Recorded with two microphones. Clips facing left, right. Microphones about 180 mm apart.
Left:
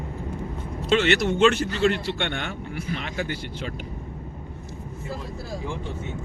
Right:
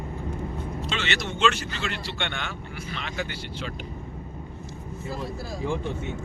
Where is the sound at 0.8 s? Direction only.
55° left (ahead or behind).